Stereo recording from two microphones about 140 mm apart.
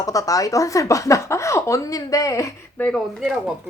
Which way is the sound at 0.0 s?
25° left (ahead or behind).